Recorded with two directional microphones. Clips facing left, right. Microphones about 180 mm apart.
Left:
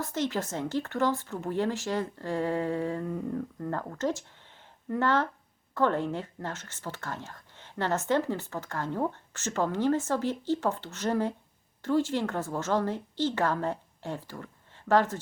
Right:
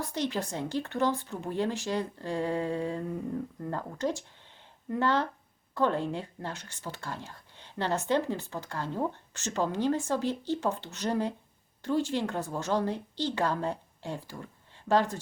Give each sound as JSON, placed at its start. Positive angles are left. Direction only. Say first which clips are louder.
{"t": 0.0, "sound": "speech", "louder": "left 1 dB", "side_deg": -15}
{"t": 8.8, "sound": "speech", "louder": "left 2 dB", "side_deg": 15}
{"t": 9.3, "sound": "a woman's voice", "louder": "left 1 dB", "side_deg": -15}